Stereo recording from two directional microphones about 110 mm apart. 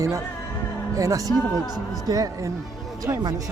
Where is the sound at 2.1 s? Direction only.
35° right (ahead or behind).